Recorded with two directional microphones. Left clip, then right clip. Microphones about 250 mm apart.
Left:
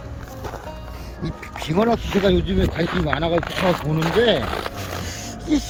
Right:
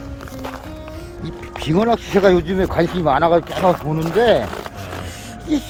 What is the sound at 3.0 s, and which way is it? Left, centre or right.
Speech, right.